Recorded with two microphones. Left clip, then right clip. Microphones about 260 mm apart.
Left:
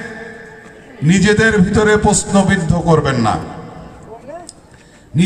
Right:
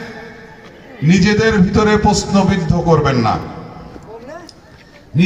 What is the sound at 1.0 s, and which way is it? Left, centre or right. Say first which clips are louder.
A man's voice: left 1 dB; left.